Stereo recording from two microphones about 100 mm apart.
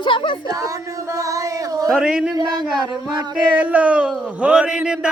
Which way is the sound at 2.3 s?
40° right (ahead or behind).